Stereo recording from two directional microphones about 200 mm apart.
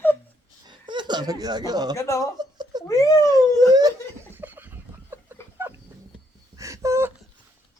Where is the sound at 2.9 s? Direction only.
15° left (ahead or behind).